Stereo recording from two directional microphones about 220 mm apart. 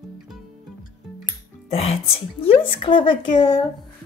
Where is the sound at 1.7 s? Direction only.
30° left (ahead or behind).